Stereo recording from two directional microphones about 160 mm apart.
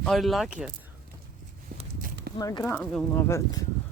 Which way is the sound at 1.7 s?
60° right (ahead or behind).